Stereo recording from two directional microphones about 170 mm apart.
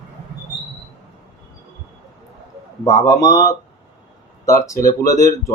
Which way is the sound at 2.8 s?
20° left (ahead or behind).